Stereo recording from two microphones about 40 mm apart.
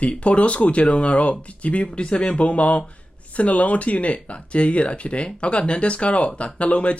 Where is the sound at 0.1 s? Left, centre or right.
Left.